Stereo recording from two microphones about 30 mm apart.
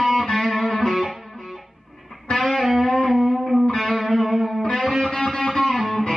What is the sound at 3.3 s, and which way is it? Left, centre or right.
Music, centre.